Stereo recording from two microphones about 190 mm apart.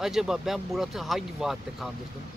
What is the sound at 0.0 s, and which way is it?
Speech, centre (ahead or behind).